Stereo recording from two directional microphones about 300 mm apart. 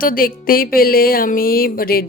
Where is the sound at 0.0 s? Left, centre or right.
Left.